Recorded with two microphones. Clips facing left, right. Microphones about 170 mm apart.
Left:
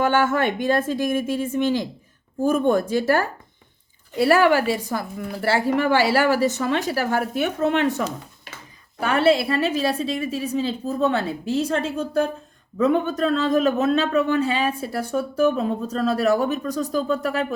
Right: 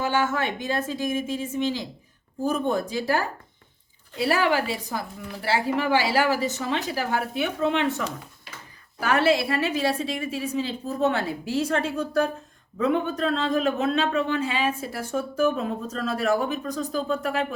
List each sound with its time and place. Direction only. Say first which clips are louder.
0.0 s a woman's voice: left 5 dB; 55° left (ahead or behind)
9.0 s a woman's voice: left 3 dB; 30° left (ahead or behind)
12.8 s a man's voice: left 4 dB; 40° left (ahead or behind)
14.8 s a man's voice: left 4 dB; 30° left (ahead or behind)